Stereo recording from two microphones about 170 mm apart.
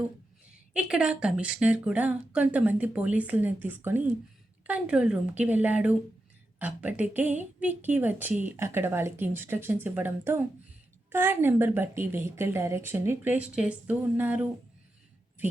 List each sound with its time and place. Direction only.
0.7 s speech: 5° right (ahead or behind)